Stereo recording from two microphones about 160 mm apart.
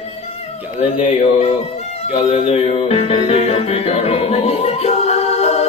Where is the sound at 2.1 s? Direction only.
40° left (ahead or behind).